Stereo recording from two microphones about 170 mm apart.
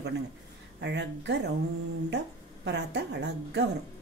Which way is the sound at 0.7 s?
90° right.